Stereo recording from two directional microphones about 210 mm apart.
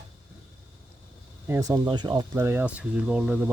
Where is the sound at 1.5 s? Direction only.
15° right (ahead or behind).